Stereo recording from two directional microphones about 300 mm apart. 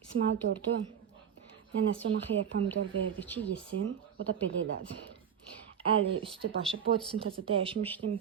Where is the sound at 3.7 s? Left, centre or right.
Right.